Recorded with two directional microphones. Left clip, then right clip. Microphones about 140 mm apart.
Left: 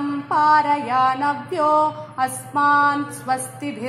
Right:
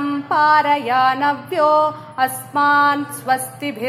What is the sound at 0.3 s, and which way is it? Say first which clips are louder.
Music: right 2 dB; 25° right (ahead or behind).